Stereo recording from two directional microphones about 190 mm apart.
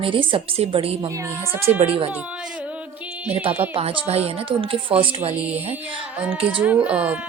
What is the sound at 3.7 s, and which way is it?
Music, 25° right (ahead or behind).